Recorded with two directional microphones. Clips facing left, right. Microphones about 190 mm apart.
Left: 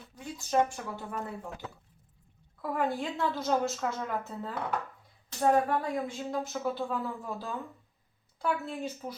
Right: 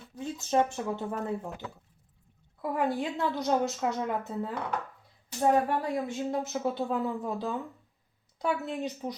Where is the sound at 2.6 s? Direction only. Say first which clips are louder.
Right 2 dB; 20° right (ahead or behind).